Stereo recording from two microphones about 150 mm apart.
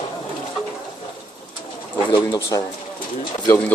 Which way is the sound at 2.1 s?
25° left (ahead or behind).